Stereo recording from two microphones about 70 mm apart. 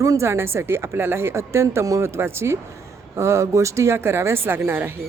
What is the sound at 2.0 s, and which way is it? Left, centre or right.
Speech, right.